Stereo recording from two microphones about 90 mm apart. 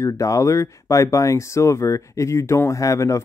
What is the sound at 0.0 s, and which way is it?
Speech, 35° left (ahead or behind).